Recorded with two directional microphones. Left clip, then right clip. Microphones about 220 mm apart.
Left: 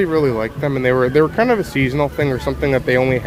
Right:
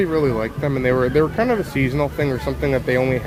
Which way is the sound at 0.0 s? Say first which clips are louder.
Left 3 dB; 15° left (ahead or behind).